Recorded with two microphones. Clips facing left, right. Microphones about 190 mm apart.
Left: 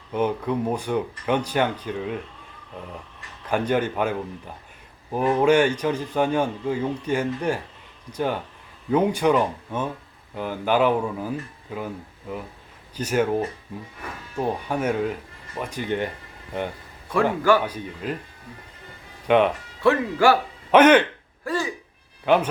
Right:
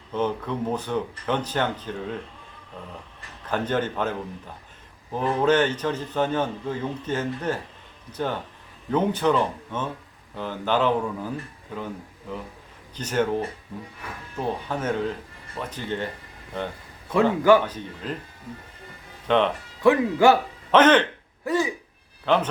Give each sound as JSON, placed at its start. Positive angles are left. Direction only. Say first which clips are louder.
{"t": 0.1, "sound": "speech", "louder": "left 3 dB", "side_deg": 10}
{"t": 3.5, "sound": "speech", "louder": "left 3 dB", "side_deg": 10}
{"t": 5.1, "sound": "speech", "louder": "left 3 dB", "side_deg": 10}
{"t": 13.0, "sound": "speech", "louder": "left 2 dB", "side_deg": 10}
{"t": 17.7, "sound": "speech", "louder": "left 3 dB", "side_deg": 10}
{"t": 19.3, "sound": "speech", "louder": "left 3 dB", "side_deg": 10}
{"t": 19.8, "sound": "speech", "louder": "right 1 dB", "side_deg": -15}
{"t": 20.7, "sound": "speech", "louder": "left 2 dB", "side_deg": 10}
{"t": 21.4, "sound": "speech", "louder": "right 3 dB", "side_deg": -20}
{"t": 22.3, "sound": "speech", "louder": "left 3 dB", "side_deg": 10}